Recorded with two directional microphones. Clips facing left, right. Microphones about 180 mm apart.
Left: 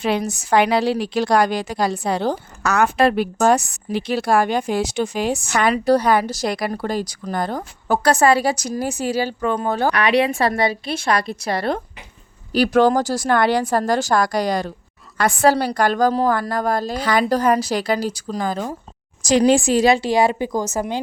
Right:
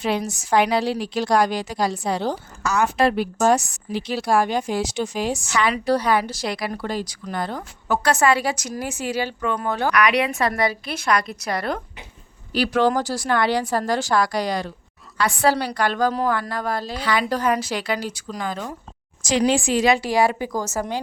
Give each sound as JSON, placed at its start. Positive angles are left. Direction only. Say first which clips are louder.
{"t": 0.0, "sound": "a woman's voice", "louder": "left 3 dB", "side_deg": 60}
{"t": 12.5, "sound": "a woman's voice", "louder": "left 4 dB", "side_deg": 45}